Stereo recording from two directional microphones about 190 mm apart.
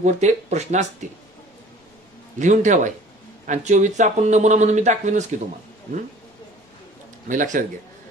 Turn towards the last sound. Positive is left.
turn(degrees=-45)  # may be behind; listen again after turning